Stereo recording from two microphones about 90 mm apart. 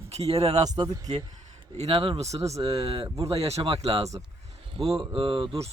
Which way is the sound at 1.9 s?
90° right.